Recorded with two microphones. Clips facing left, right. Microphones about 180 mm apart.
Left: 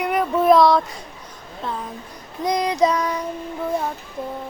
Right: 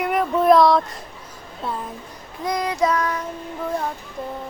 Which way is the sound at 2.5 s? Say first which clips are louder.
Left 2 dB; 15° left (ahead or behind).